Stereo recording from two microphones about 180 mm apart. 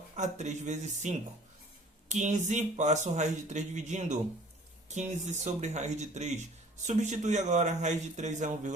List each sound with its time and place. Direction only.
0.2 s speech: 40° right (ahead or behind)